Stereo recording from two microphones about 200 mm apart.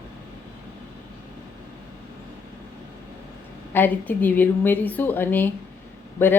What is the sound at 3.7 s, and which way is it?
A woman's voice, 10° left (ahead or behind).